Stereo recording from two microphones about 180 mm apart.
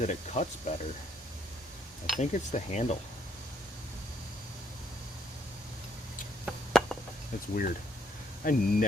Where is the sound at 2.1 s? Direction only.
40° left (ahead or behind).